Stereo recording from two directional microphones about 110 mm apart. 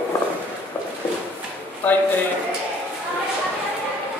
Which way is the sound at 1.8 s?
15° left (ahead or behind).